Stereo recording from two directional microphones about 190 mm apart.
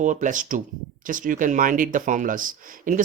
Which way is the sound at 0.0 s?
40° right (ahead or behind).